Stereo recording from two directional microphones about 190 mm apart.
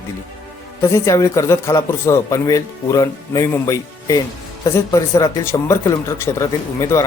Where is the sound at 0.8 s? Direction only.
15° left (ahead or behind).